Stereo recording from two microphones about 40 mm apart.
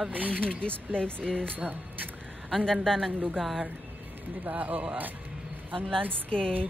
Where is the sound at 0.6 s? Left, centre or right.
Left.